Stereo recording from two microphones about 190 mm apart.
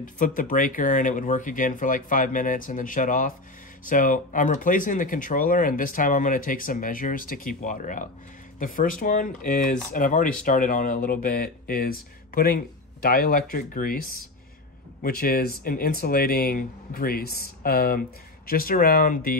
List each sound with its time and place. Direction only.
0.0 s speech: 45° left (ahead or behind)